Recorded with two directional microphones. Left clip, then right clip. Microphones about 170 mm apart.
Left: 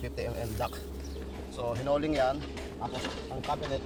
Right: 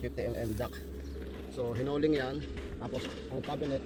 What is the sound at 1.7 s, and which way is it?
Speech, 35° left (ahead or behind).